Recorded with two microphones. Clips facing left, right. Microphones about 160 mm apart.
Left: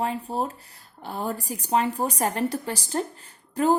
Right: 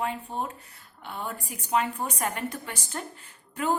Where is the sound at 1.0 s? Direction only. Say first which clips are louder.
Left 6 dB; 35° left (ahead or behind).